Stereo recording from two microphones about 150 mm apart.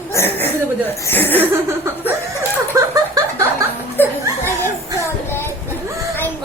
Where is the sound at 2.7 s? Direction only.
20° right (ahead or behind).